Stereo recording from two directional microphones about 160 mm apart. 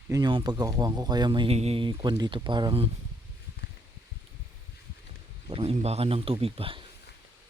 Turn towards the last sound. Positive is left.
turn(degrees=-35)  # may be behind; listen again after turning